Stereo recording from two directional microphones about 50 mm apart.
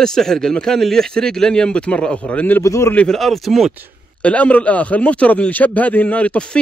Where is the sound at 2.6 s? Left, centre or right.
Left.